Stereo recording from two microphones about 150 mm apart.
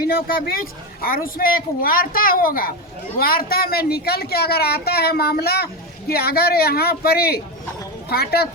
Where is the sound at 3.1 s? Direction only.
85° left.